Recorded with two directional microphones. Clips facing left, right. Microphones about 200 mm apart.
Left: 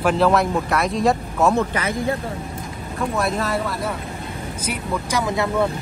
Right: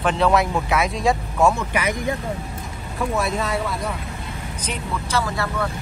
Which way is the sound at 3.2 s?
Centre (ahead or behind).